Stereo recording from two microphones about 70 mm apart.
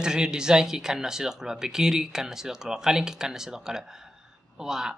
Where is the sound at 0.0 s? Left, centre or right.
Centre.